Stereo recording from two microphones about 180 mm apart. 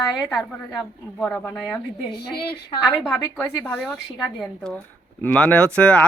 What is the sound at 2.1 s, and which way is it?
Speech, 65° left (ahead or behind).